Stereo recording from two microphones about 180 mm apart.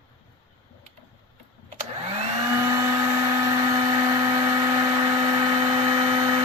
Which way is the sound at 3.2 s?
20° right (ahead or behind).